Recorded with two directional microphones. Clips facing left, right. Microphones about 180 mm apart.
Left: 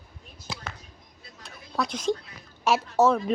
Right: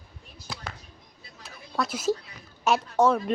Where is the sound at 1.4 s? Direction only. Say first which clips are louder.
Even; centre (ahead or behind).